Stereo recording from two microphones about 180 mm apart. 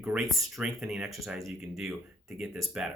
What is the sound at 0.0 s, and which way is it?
Speech, 5° right (ahead or behind).